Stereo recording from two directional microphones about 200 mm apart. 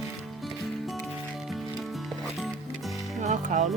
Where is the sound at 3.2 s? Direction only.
35° right (ahead or behind).